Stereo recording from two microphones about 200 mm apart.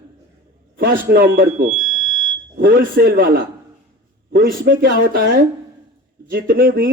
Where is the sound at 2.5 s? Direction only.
45° right (ahead or behind).